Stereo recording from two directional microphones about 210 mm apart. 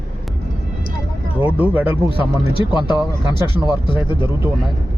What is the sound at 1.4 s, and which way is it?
Speech, 5° right (ahead or behind).